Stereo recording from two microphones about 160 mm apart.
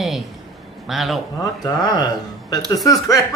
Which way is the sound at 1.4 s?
25° left (ahead or behind).